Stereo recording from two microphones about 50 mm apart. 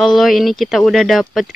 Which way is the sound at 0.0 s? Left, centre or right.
Centre.